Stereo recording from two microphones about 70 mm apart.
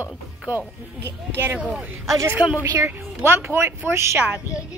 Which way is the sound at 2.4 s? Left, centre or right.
Left.